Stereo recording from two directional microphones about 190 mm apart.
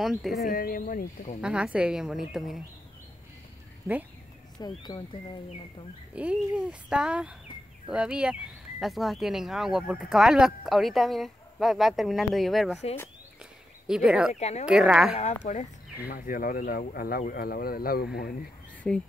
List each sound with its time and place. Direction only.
0.0 s speech: centre (ahead or behind)
0.5 s speech: 50° left (ahead or behind)
1.4 s speech: 5° right (ahead or behind)
4.6 s speech: 20° left (ahead or behind)
6.1 s speech: 5° right (ahead or behind)
13.8 s speech: 5° right (ahead or behind)
14.4 s speech: 35° left (ahead or behind)
14.7 s speech: 5° right (ahead or behind)
15.5 s speech: 40° left (ahead or behind)